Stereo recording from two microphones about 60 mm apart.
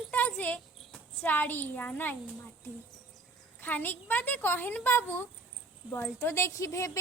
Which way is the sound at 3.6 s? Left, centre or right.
Left.